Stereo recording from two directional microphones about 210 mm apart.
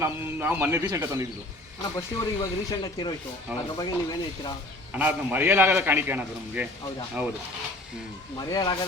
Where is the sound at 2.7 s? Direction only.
20° left (ahead or behind).